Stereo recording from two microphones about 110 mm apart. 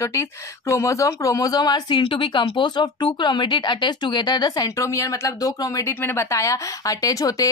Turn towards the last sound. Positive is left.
turn(degrees=35)  # may be behind; listen again after turning